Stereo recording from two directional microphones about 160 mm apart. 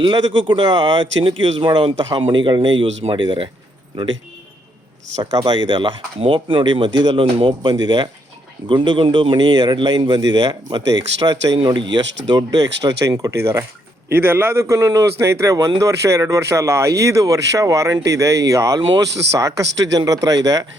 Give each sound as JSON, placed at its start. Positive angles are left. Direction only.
{"t": 0.0, "sound": "speech", "side_deg": -30}
{"t": 5.2, "sound": "a man's voice", "side_deg": -25}